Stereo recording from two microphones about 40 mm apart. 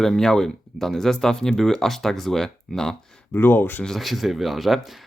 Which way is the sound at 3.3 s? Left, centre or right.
Left.